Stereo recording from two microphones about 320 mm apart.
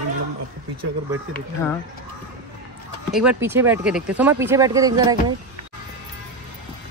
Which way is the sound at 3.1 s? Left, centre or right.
Centre.